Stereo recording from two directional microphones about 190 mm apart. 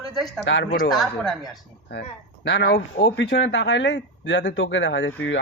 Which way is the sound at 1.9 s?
65° left (ahead or behind).